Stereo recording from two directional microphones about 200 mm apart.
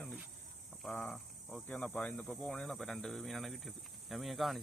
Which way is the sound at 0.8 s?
5° left (ahead or behind).